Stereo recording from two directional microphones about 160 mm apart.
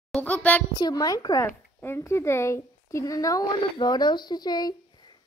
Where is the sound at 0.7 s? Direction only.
25° left (ahead or behind).